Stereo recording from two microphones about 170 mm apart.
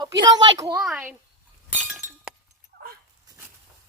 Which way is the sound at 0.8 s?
5° right (ahead or behind).